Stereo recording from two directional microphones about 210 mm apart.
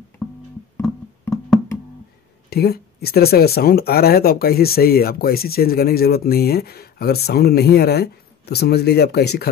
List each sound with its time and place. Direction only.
0.7 s music: 5° left (ahead or behind)
2.5 s speech: 50° left (ahead or behind)